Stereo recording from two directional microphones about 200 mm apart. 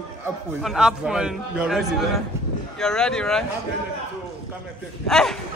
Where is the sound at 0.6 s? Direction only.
5° right (ahead or behind).